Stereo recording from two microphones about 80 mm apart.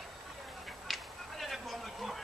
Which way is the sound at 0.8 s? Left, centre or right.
Centre.